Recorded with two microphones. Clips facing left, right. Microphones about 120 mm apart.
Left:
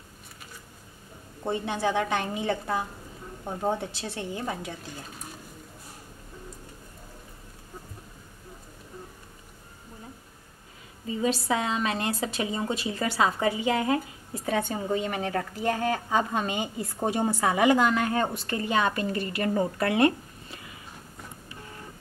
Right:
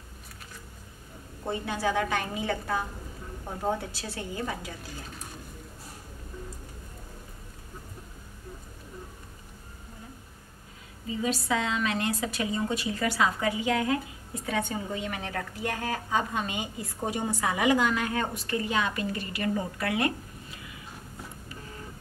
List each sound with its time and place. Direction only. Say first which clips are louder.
1.4 s a woman's voice: left 2 dB; 25° left (ahead or behind)
11.1 s a woman's voice: left 2 dB; 30° left (ahead or behind)